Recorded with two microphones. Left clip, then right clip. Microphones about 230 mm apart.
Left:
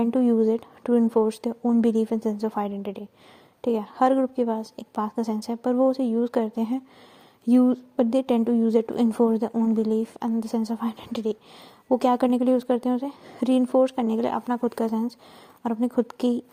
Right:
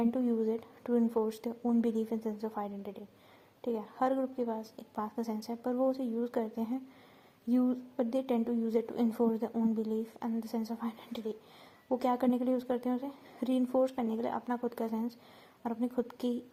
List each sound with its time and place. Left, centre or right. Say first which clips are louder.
0.0 s a woman's voice: left 10 dB; left